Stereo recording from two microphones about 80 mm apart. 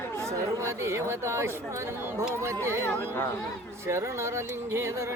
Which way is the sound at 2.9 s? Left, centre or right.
Left.